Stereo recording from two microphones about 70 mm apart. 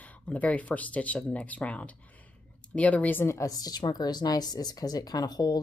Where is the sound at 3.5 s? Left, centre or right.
Left.